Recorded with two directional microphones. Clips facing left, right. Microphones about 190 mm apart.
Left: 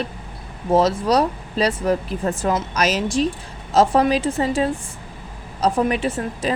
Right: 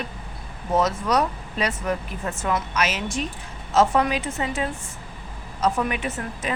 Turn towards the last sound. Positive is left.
turn(degrees=30)  # may be behind; listen again after turning